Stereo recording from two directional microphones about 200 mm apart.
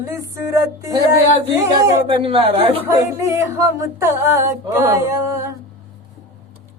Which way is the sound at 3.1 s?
15° right (ahead or behind).